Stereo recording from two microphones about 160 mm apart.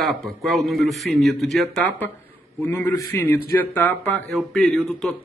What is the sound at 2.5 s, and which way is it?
A man's voice, 15° left (ahead or behind).